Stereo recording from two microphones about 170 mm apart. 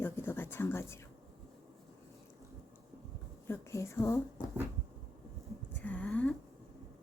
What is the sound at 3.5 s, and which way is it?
Speech, 15° left (ahead or behind).